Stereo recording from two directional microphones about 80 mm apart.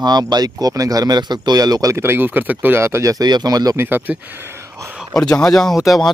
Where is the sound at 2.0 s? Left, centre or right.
Right.